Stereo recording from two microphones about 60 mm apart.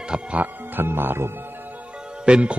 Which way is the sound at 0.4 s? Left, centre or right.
Right.